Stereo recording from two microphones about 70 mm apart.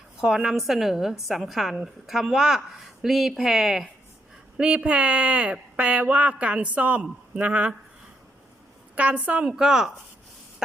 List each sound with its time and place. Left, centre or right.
0.2 s speech: centre
4.5 s speech: centre
9.0 s a woman's voice: right